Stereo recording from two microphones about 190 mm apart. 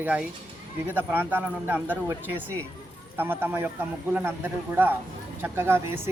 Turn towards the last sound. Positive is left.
turn(degrees=-10)  # may be behind; listen again after turning